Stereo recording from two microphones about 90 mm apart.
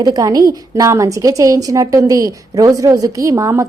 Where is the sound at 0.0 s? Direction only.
45° right (ahead or behind).